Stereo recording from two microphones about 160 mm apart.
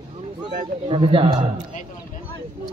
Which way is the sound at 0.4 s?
30° right (ahead or behind).